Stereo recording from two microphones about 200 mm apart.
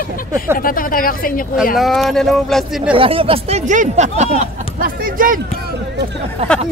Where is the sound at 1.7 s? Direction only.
Centre (ahead or behind).